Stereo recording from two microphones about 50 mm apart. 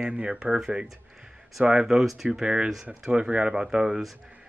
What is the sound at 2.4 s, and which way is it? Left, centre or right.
A man's voice, centre.